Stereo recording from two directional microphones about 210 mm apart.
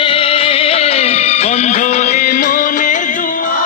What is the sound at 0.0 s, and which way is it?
Music, 25° left (ahead or behind).